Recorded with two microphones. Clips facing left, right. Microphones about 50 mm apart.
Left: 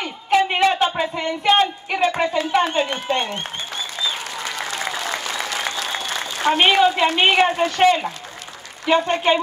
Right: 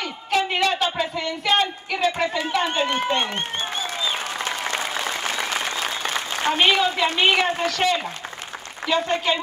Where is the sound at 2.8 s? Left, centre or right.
Right.